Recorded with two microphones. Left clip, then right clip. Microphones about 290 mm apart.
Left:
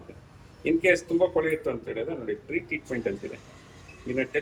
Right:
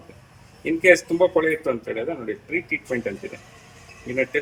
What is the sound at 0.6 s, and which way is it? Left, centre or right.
Speech, right.